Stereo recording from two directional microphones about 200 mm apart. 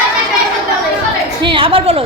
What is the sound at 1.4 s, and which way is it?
Speech, 25° right (ahead or behind).